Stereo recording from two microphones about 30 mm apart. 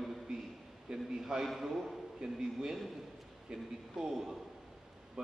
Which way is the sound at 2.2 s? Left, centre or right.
Right.